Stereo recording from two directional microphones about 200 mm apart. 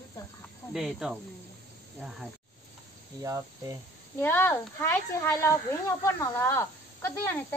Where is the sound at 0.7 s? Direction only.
Centre (ahead or behind).